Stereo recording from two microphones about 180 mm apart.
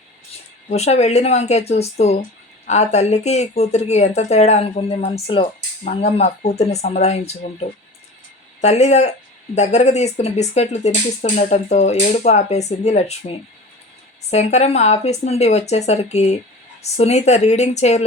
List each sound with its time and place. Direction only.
0.7 s speech: 35° left (ahead or behind)